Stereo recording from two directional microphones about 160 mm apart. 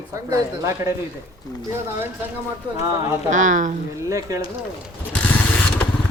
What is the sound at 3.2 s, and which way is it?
Speech, 50° right (ahead or behind).